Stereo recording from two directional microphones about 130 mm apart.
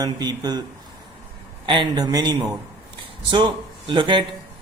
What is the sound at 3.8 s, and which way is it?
Speech, 35° right (ahead or behind).